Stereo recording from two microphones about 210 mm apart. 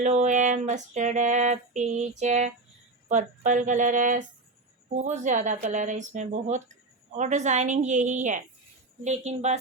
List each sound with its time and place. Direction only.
0.0 s female singing: 35° right (ahead or behind)